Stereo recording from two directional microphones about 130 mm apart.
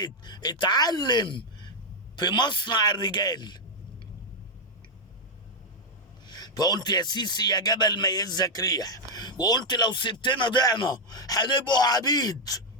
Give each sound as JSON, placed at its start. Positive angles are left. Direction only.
{"t": 0.0, "sound": "a man's voice", "side_deg": 35}
{"t": 6.2, "sound": "a man's voice", "side_deg": 30}